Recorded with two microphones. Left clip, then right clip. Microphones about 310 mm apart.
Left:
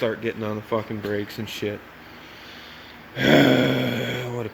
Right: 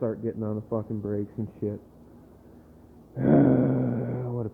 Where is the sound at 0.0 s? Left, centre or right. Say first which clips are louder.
Left 5 dB; centre.